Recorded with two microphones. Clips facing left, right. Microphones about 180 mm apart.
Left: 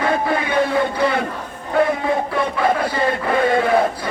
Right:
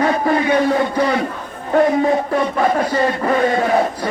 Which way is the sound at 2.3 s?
45° right (ahead or behind).